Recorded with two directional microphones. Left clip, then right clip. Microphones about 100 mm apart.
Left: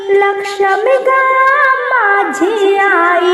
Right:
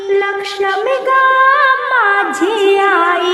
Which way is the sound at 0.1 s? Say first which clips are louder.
Left 4 dB; 35° left (ahead or behind).